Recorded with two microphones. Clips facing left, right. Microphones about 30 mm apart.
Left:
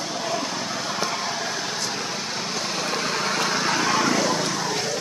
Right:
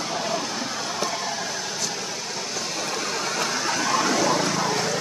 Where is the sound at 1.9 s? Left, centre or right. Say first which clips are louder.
Left 2 dB; left.